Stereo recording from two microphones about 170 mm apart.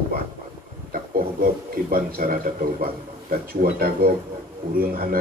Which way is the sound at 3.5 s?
60° right (ahead or behind).